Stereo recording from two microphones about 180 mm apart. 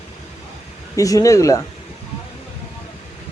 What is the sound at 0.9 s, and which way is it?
Speech, 20° left (ahead or behind).